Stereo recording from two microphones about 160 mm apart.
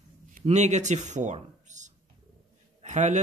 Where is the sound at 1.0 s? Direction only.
50° right (ahead or behind).